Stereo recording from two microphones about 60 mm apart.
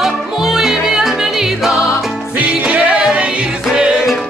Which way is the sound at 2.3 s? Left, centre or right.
Right.